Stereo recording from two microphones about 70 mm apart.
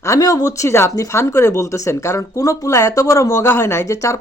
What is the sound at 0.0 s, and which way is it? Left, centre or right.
Speech, left.